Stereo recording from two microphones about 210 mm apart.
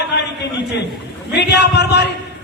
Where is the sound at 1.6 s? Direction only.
55° left (ahead or behind).